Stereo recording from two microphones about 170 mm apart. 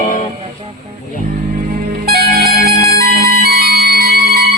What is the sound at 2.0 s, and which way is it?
Music, 65° right (ahead or behind).